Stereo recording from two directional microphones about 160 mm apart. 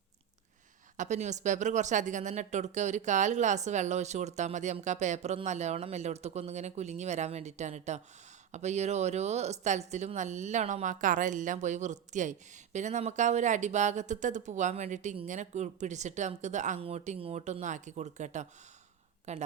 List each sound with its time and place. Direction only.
0.9 s speech: 45° right (ahead or behind)